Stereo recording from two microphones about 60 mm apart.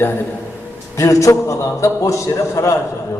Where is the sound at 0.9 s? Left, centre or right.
Left.